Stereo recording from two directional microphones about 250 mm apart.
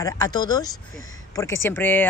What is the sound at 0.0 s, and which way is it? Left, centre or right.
Speech, centre.